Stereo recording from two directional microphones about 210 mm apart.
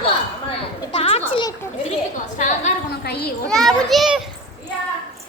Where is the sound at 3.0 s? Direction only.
50° left (ahead or behind).